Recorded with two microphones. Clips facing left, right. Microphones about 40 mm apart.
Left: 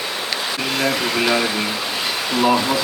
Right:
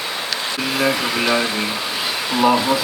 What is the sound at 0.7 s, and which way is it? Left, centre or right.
Speech, centre.